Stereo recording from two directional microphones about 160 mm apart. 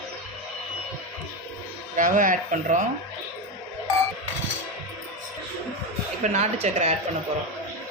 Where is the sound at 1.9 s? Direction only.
55° right (ahead or behind).